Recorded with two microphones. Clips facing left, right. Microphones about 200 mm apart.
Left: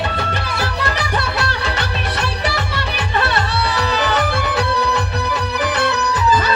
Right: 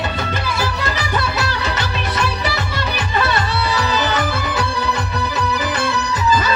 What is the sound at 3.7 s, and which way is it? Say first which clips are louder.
Music: left 1 dB; 65° left (ahead or behind).